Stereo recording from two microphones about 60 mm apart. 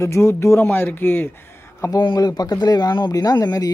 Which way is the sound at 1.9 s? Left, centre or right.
Left.